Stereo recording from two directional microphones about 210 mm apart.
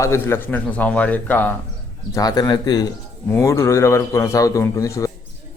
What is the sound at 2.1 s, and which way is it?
A man's voice, 20° left (ahead or behind).